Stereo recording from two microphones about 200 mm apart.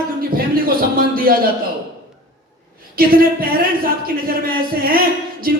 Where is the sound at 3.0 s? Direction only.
45° right (ahead or behind).